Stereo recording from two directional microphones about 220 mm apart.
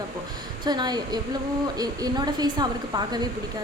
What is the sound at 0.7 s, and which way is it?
A woman's voice, 20° right (ahead or behind).